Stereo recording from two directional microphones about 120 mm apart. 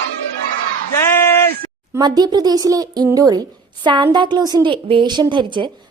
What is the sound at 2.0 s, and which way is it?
A woman's voice, 35° right (ahead or behind).